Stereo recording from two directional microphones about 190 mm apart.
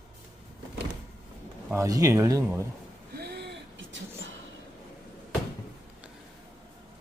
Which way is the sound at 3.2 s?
60° right (ahead or behind).